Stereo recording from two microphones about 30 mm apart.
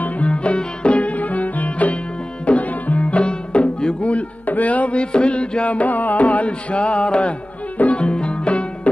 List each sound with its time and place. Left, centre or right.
0.3 s music: left
0.9 s music: left
4.5 s music: left
4.9 s music: left
5.7 s music: left
6.7 s music: left
7.7 s music: left
8.0 s music: left